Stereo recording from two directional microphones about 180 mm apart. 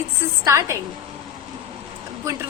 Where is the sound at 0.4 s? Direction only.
15° right (ahead or behind).